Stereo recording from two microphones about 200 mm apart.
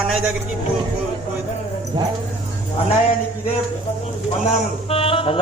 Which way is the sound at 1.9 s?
25° right (ahead or behind).